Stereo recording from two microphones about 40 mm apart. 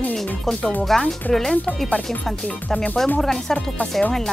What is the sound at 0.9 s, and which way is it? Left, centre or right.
Speech, centre.